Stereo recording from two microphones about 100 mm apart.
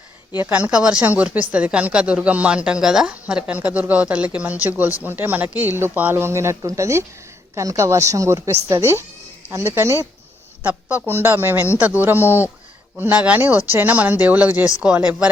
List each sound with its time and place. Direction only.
0.3 s a woman's voice: 15° right (ahead or behind)
10.6 s speech: 20° right (ahead or behind)